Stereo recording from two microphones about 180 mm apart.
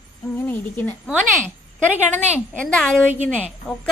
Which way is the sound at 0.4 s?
10° left (ahead or behind).